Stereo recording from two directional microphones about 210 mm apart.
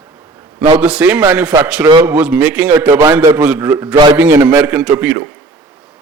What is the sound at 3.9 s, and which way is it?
Speech, 20° right (ahead or behind).